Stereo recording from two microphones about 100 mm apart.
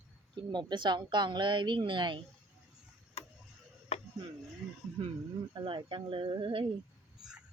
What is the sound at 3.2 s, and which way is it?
Tick-tock, 90° left.